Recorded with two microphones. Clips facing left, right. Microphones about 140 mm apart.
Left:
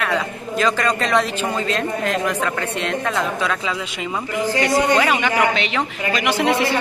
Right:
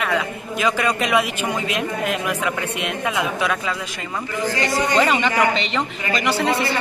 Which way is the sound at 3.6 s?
15° left (ahead or behind).